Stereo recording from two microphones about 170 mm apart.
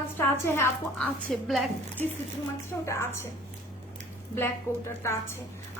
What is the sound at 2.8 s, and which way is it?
Speech, 15° left (ahead or behind).